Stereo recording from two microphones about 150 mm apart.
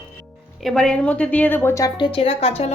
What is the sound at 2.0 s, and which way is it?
Speech, 35° left (ahead or behind).